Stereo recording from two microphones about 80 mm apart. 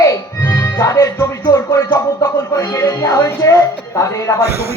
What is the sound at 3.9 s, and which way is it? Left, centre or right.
Music, left.